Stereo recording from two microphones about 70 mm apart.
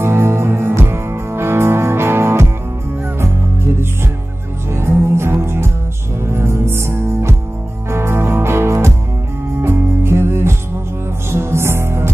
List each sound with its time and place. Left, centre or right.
0.0 s music: right
4.7 s music: right